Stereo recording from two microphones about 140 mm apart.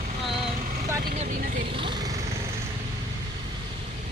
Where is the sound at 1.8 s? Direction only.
30° right (ahead or behind).